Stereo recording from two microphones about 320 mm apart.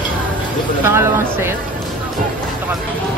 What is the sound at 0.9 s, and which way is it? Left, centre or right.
Speech, centre.